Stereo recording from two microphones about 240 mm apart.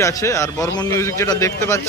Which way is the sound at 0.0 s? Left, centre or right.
Centre.